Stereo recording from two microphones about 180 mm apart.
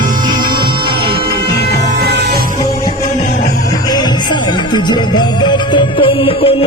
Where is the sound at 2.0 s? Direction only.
65° right (ahead or behind).